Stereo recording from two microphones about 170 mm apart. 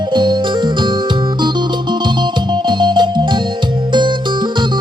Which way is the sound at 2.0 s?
25° right (ahead or behind).